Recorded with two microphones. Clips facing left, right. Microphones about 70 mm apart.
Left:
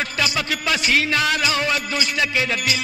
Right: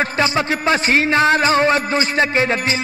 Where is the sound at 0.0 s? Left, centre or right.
Right.